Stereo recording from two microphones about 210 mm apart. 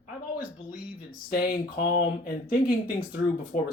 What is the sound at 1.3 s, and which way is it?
Speech, 45° left (ahead or behind).